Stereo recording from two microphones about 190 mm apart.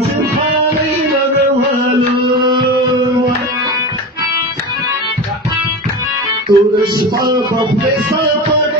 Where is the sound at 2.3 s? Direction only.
25° right (ahead or behind).